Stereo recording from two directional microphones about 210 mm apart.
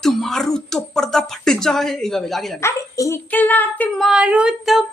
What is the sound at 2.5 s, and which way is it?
A woman's voice, 15° left (ahead or behind).